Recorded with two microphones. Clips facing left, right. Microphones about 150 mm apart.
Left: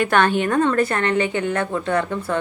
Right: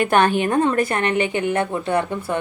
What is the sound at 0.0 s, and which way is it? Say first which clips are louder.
A woman's voice: right 1 dB; 15° right (ahead or behind).